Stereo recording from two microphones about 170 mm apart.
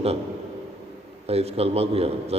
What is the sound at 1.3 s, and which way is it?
A man's voice, 35° right (ahead or behind).